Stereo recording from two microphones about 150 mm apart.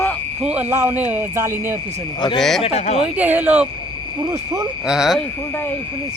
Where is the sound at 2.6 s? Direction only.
45° left (ahead or behind).